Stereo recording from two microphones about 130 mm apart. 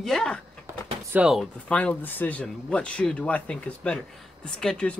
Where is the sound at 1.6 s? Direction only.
10° left (ahead or behind).